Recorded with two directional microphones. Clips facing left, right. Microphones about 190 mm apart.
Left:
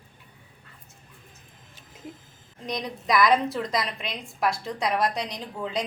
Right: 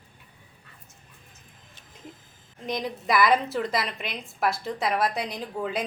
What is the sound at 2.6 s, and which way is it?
A woman's voice, 5° right (ahead or behind).